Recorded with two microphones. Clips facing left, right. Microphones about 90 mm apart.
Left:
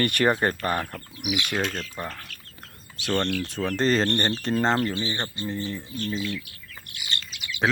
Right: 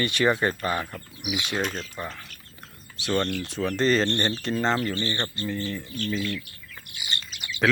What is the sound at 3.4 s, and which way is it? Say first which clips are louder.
Speech: even; 45° left (ahead or behind).